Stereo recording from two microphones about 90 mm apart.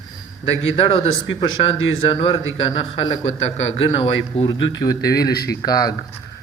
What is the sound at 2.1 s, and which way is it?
Speech, 85° left.